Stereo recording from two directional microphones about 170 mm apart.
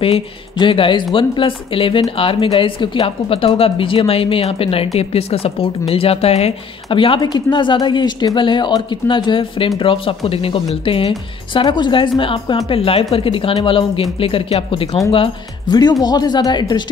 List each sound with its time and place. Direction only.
0.0 s speech: 30° left (ahead or behind)
15.7 s speech: 25° left (ahead or behind)